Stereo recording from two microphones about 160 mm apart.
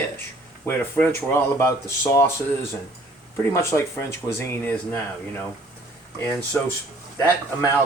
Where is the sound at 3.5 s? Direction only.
15° left (ahead or behind).